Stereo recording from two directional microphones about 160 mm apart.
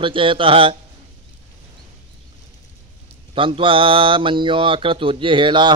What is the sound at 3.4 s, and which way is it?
Speech, 35° right (ahead or behind).